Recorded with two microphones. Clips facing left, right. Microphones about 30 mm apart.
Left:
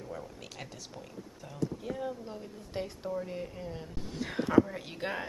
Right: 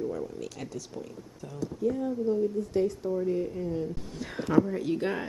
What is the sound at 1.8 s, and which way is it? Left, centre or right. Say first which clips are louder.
Speech: right 8 dB; left.